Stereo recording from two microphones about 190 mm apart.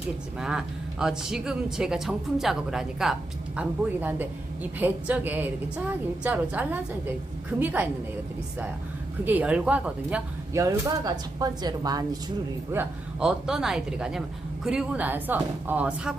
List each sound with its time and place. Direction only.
0.3 s speech: 5° right (ahead or behind)
9.2 s speech: 10° right (ahead or behind)
10.6 s speech: 15° right (ahead or behind)
12.7 s speech: 10° right (ahead or behind)